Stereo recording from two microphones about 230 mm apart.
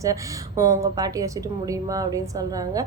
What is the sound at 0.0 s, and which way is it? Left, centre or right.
A woman's voice, centre.